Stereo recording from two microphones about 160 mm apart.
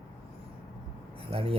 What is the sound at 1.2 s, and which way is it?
Speech, 35° right (ahead or behind).